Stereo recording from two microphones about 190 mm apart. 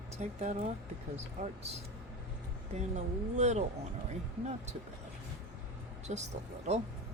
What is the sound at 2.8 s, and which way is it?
Speech, 35° right (ahead or behind).